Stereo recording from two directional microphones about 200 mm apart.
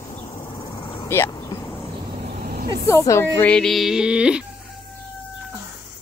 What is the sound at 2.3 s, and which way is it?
Vehicle, 50° right (ahead or behind).